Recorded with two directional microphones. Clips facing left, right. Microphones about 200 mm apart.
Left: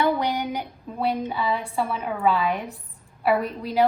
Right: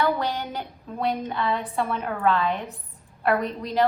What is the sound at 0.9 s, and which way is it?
A woman's voice, 5° left (ahead or behind).